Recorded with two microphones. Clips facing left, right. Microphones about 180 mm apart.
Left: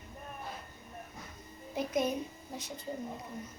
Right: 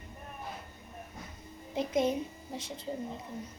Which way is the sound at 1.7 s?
25° right (ahead or behind).